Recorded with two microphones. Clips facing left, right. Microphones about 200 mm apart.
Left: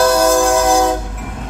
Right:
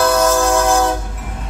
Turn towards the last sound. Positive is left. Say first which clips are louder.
# left 2 dB
turn(degrees=15)  # may be behind; listen again after turning